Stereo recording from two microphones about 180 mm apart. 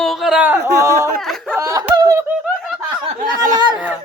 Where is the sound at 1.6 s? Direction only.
20° right (ahead or behind).